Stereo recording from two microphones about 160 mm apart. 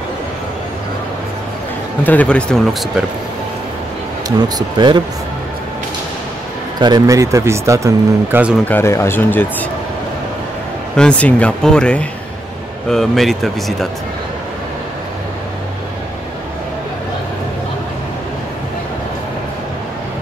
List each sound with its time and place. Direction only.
2.0 s speech: 10° left (ahead or behind)
4.6 s speech: 30° right (ahead or behind)
6.8 s speech: 25° right (ahead or behind)
8.6 s speech: 15° left (ahead or behind)
11.0 s speech: 5° left (ahead or behind)